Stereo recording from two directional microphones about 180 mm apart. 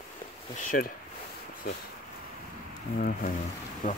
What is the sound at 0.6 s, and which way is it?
Speech, 50° left (ahead or behind).